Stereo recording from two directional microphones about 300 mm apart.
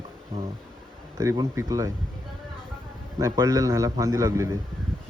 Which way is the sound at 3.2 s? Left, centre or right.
Centre.